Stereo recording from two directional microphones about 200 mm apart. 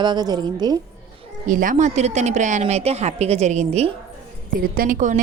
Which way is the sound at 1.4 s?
40° right (ahead or behind).